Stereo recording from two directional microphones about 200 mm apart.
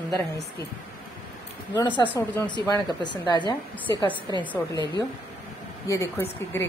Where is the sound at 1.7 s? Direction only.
20° left (ahead or behind).